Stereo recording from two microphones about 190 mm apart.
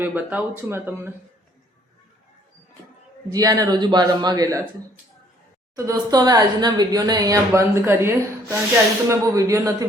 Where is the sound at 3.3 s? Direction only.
20° right (ahead or behind).